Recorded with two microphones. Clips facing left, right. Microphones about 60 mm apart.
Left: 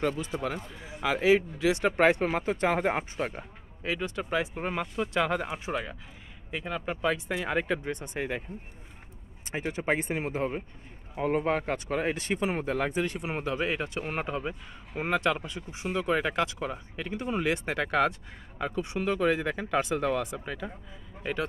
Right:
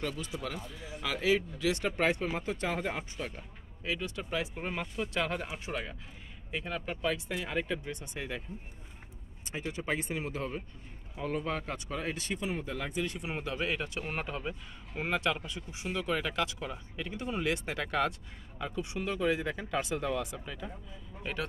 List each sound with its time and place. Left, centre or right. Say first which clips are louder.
0.4 s speech: left 5 dB; left
4.7 s speech: left 5 dB; centre
5.7 s speech: left 5 dB; centre; by 8.5 s left
9.5 s speech: left 6 dB; left
12.4 s speech: left 7 dB; left
19.1 s speech: left 3 dB; left